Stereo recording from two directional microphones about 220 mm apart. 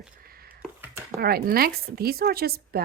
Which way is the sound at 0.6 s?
10° right (ahead or behind).